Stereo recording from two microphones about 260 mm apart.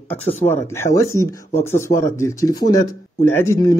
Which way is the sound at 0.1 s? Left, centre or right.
Centre.